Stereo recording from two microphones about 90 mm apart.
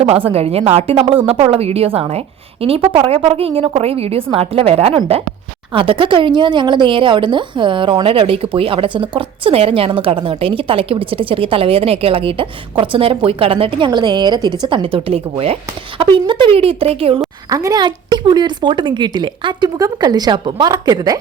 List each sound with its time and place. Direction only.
0.0 s a woman's voice: 90° right
5.7 s speech: 75° right (ahead or behind)
16.0 s speech: 70° right (ahead or behind); by 17.2 s 90° right
17.5 s a woman's voice: 35° right (ahead or behind)
17.7 s a woman's voice: 55° right (ahead or behind)
20.7 s speech: 45° right (ahead or behind)